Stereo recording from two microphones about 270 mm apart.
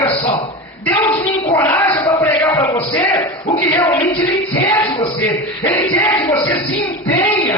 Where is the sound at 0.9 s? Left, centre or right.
Centre.